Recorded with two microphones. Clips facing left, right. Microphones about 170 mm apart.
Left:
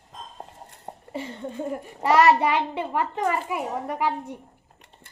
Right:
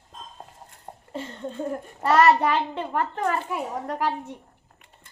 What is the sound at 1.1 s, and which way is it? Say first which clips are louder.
A child's voice: even; 10° left (ahead or behind).